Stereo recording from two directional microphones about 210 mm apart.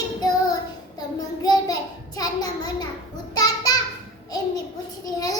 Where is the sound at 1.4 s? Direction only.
15° left (ahead or behind).